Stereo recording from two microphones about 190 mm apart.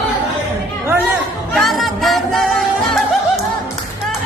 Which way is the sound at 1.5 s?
Centre (ahead or behind).